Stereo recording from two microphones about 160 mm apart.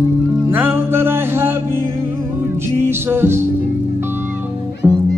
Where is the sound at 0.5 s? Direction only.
15° right (ahead or behind).